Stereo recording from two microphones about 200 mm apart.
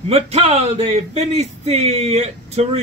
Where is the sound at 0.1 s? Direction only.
30° right (ahead or behind).